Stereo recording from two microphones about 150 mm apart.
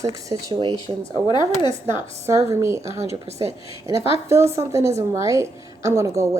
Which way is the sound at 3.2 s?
45° right (ahead or behind).